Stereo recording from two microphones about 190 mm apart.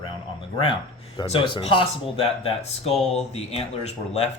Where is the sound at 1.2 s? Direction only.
25° left (ahead or behind).